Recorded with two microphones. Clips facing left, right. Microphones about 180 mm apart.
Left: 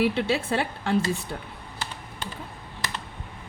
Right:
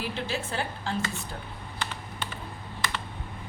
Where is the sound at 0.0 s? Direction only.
70° left (ahead or behind).